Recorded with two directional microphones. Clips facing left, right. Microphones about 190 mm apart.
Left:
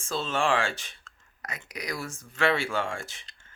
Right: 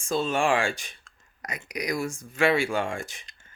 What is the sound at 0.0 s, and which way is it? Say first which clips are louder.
Speech: right 3 dB; 15° right (ahead or behind).